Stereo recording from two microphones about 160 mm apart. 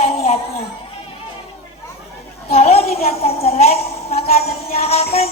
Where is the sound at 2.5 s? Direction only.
40° left (ahead or behind).